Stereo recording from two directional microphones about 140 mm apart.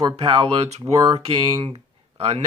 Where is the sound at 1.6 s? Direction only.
45° right (ahead or behind).